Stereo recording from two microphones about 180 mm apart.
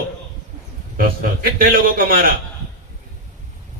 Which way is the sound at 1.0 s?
55° right (ahead or behind).